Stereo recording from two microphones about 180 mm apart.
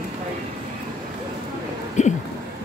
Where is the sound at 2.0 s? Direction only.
40° left (ahead or behind).